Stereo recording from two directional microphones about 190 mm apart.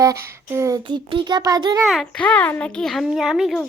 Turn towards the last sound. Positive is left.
turn(degrees=0)  # may be behind; listen again after turning